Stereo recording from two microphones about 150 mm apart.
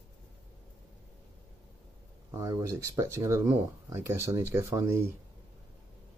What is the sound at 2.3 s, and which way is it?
Speech, 20° right (ahead or behind).